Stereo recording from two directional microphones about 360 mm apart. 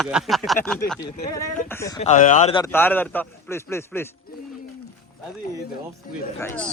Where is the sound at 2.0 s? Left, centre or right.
Centre.